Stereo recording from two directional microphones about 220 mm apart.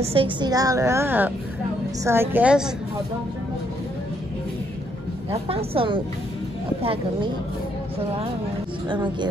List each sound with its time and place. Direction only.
0.0 s a woman's voice: 25° right (ahead or behind); by 2.7 s 5° right (ahead or behind)
5.3 s a woman's voice: 25° right (ahead or behind)
8.8 s a woman's voice: 20° right (ahead or behind)